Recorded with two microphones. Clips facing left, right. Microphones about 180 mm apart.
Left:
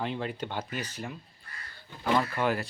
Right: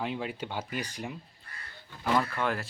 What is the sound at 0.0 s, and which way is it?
Speech, 5° right (ahead or behind).